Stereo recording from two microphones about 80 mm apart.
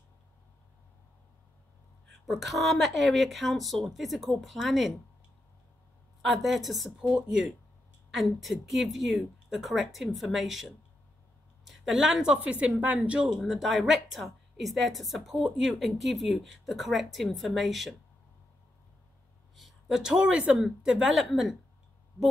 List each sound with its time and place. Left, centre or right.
2.2 s speech: centre
6.2 s speech: centre
7.0 s a woman's voice: centre
13.4 s speech: centre
19.5 s speech: centre